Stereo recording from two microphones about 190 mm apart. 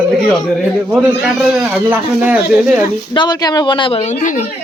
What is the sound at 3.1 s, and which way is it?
A woman's voice, 25° left (ahead or behind).